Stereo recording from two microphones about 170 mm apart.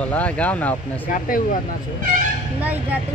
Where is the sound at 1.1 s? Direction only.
50° left (ahead or behind).